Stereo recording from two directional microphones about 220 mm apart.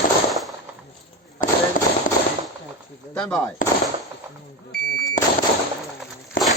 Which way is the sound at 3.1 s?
5° left (ahead or behind).